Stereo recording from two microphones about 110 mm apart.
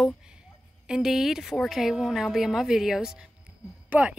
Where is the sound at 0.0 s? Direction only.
5° right (ahead or behind).